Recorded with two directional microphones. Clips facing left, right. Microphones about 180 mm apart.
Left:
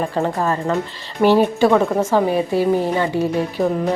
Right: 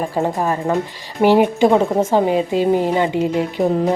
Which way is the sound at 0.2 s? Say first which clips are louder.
Right 2 dB; 15° right (ahead or behind).